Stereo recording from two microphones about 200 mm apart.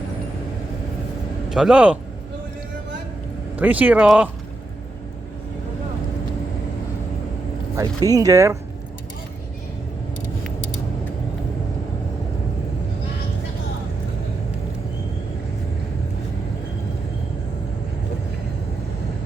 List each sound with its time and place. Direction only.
1.5 s speech: centre (ahead or behind)
3.5 s speech: 5° right (ahead or behind)
7.8 s speech: 15° right (ahead or behind)